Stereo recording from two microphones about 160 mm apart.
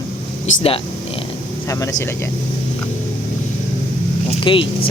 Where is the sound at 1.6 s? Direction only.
20° left (ahead or behind).